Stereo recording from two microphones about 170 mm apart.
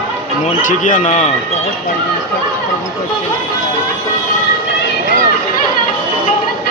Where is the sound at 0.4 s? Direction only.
50° left (ahead or behind).